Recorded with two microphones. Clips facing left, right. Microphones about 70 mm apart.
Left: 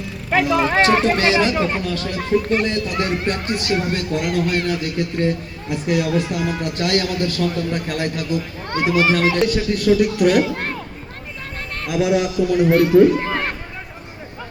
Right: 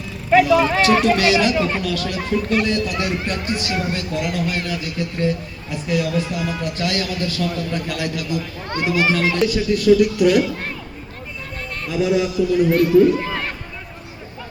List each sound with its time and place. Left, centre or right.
0.3 s a man's voice: left
12.0 s a man's voice: left
12.7 s speech: left